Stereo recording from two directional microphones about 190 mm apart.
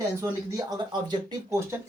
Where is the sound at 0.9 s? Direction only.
25° right (ahead or behind).